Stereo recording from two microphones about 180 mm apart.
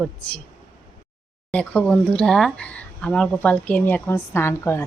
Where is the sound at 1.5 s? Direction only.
5° left (ahead or behind).